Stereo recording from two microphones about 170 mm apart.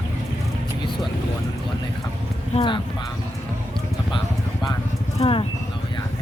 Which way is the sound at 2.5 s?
30° left (ahead or behind).